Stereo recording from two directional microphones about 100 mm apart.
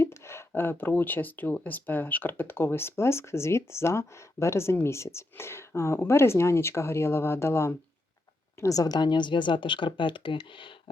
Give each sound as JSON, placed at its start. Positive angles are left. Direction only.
{"t": 0.0, "sound": "speech", "side_deg": 25}